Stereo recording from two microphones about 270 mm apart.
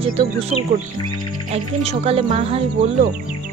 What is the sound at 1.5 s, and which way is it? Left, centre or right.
Speech, right.